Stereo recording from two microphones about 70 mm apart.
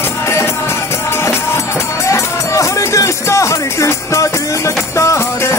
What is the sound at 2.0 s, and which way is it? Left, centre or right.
Music, left.